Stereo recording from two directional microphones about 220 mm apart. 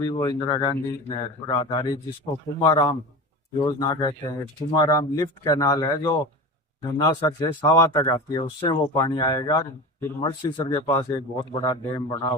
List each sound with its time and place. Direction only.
0.1 s speech: 15° left (ahead or behind)